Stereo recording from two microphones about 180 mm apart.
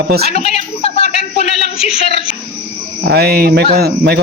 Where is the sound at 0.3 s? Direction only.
35° left (ahead or behind).